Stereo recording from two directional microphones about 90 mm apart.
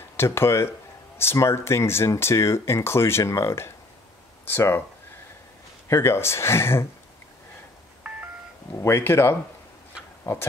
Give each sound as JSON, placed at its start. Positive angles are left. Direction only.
{"t": 0.2, "sound": "speech", "side_deg": 30}
{"t": 5.9, "sound": "speech", "side_deg": 30}
{"t": 8.0, "sound": "telephone dialing", "side_deg": -10}
{"t": 8.8, "sound": "speech", "side_deg": 30}